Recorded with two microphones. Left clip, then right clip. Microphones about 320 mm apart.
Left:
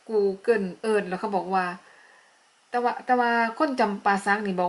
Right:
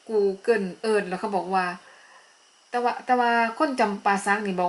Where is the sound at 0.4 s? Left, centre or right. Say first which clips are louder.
Even; centre.